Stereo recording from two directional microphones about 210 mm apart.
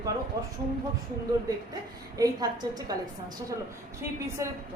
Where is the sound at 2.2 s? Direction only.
15° right (ahead or behind).